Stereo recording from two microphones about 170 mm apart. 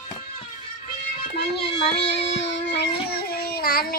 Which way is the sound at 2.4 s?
90° left.